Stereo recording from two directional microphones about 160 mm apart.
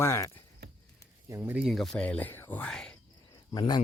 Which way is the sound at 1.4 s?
5° right (ahead or behind).